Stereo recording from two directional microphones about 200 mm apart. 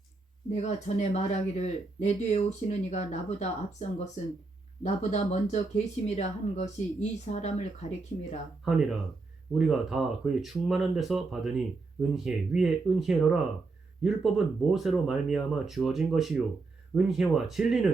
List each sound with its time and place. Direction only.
0.5 s speech: 35° left (ahead or behind)
8.6 s speech: centre (ahead or behind)